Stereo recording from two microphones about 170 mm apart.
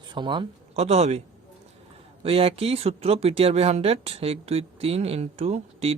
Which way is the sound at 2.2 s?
35° right (ahead or behind).